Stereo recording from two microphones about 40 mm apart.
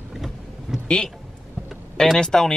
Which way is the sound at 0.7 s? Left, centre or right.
Right.